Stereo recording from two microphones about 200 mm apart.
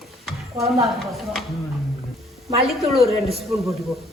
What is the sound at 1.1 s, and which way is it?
Speech, centre (ahead or behind).